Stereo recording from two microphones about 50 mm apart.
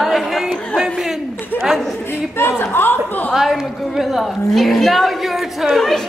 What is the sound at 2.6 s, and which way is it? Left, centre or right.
Speech, left.